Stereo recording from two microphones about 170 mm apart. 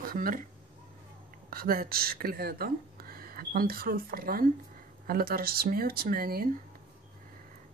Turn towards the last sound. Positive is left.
turn(degrees=-60)  # may be behind; listen again after turning